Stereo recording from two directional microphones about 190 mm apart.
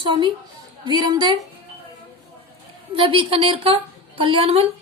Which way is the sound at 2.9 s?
25° right (ahead or behind).